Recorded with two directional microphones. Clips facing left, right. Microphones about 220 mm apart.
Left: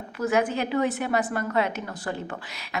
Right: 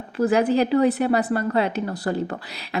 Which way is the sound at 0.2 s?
35° right (ahead or behind).